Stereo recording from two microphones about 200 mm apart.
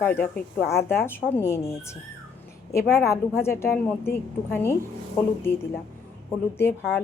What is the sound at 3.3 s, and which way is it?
Speech, 10° left (ahead or behind).